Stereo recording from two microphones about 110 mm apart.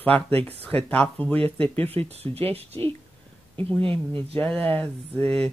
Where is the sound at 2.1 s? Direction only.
65° right (ahead or behind).